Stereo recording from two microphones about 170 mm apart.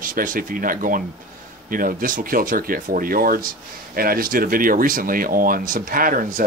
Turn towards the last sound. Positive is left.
turn(degrees=-55)  # may be behind; listen again after turning